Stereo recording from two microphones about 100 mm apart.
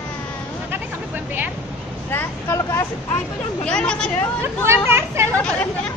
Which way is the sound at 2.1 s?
25° left (ahead or behind).